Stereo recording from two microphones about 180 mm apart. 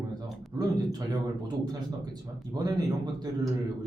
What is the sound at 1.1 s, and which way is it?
Speech, 20° right (ahead or behind).